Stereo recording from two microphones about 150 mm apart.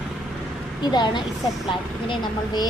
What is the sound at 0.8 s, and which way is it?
A woman's voice, 30° left (ahead or behind).